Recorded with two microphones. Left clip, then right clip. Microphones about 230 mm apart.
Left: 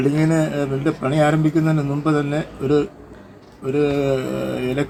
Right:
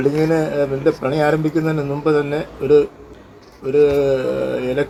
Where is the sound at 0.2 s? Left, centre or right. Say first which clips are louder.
Right 3 dB; left.